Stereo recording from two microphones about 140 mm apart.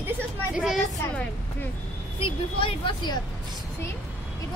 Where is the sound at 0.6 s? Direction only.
5° right (ahead or behind).